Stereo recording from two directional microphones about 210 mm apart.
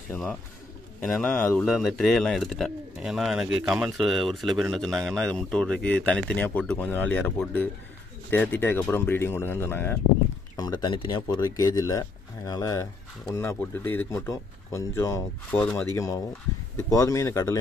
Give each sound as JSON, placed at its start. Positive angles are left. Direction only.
{"t": 0.1, "sound": "speech", "side_deg": 5}